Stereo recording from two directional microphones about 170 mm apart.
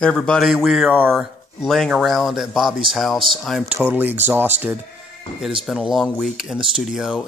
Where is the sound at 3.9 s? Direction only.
10° right (ahead or behind).